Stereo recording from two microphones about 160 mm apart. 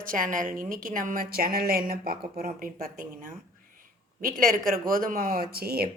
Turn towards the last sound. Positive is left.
turn(degrees=-70)  # may be behind; listen again after turning